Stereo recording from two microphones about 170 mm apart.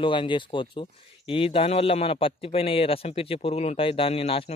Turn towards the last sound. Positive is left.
turn(degrees=35)  # may be behind; listen again after turning